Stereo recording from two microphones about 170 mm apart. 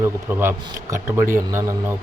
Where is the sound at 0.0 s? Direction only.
15° right (ahead or behind).